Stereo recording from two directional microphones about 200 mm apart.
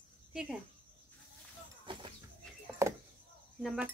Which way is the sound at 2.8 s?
15° right (ahead or behind).